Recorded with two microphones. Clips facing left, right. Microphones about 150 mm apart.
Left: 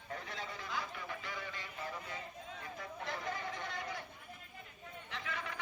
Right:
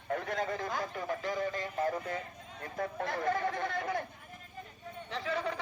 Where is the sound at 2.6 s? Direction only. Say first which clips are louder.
Right 12 dB; 55° right (ahead or behind).